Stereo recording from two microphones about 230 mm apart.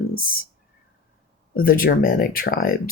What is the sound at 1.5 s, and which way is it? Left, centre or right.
Speech, left.